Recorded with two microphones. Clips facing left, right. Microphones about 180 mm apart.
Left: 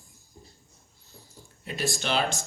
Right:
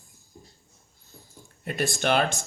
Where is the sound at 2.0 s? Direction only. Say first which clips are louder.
Right 5 dB; 55° right (ahead or behind).